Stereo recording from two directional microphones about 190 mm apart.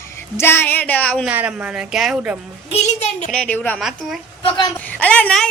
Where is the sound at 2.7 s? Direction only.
35° left (ahead or behind).